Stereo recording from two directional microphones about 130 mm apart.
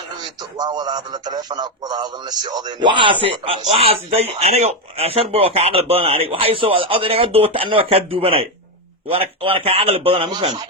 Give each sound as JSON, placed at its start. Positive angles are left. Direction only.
{"t": 0.5, "sound": "a man's voice", "side_deg": -30}